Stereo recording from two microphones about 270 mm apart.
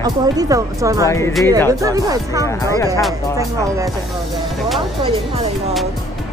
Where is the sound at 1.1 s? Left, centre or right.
Centre.